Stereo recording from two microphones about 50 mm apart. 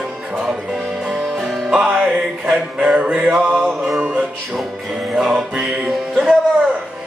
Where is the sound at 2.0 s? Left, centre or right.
Centre.